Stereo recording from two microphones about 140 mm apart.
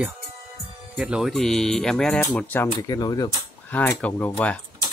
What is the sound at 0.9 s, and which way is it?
Speech, 5° right (ahead or behind).